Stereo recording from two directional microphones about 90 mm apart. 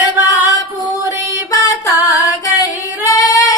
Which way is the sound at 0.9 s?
40° left (ahead or behind).